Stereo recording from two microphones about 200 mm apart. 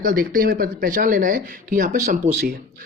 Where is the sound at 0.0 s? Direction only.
45° right (ahead or behind).